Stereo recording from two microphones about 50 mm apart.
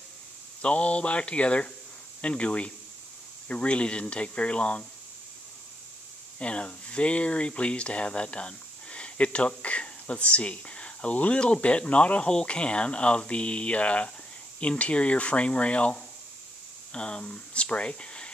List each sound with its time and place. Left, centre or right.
0.6 s speech: left
6.4 s speech: left